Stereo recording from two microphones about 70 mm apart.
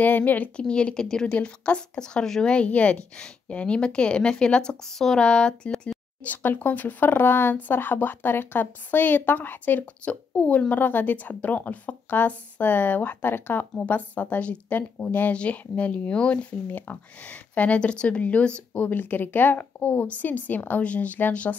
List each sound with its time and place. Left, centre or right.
0.0 s speech: left; by 5.9 s centre
6.2 s a woman's voice: left